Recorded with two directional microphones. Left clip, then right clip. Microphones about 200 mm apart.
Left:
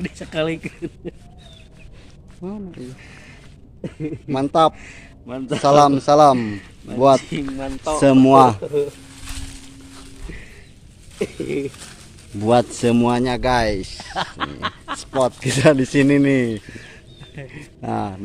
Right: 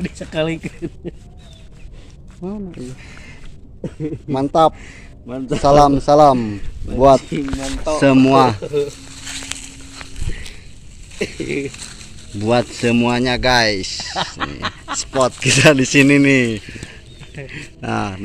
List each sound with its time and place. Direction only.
0.0 s speech: 20° right (ahead or behind)
2.4 s a man's voice: 5° right (ahead or behind)
3.8 s a man's voice: centre (ahead or behind)
11.1 s a sound: 20° left (ahead or behind)
12.4 s a man's voice: 20° left (ahead or behind); by 18.2 s centre (ahead or behind)